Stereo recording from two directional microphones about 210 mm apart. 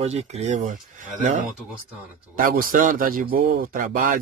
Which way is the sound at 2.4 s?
40° right (ahead or behind).